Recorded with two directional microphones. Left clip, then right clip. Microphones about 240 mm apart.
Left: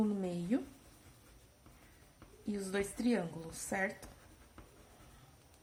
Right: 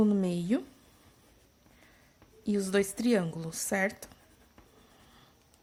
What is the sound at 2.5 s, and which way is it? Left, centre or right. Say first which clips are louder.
Speech: right 9 dB; right.